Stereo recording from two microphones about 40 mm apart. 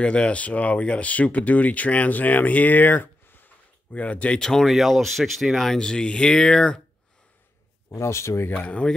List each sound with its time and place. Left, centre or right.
0.0 s speech: left
2.8 s a sound: left
3.9 s speech: left
4.4 s speech: centre
4.6 s speech: centre
5.8 s speech: centre
8.3 s speech: left
8.5 s speech: left